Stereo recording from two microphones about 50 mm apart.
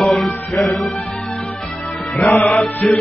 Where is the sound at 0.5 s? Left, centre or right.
Left.